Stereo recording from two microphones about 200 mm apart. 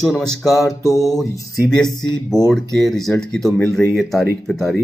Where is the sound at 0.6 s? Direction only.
15° left (ahead or behind).